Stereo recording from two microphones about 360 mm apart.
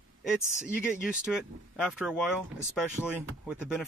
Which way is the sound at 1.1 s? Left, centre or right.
Centre.